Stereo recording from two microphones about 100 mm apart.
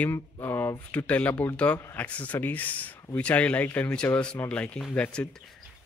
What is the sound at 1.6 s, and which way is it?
Speech, 15° left (ahead or behind).